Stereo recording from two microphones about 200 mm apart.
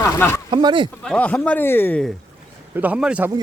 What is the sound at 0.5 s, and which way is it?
Speech, 25° right (ahead or behind).